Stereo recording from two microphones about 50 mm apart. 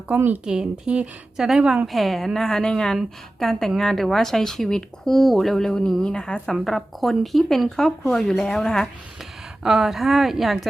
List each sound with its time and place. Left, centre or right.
0.1 s speech: right
0.4 s a woman's voice: centre
1.9 s speech: centre
9.6 s speech: centre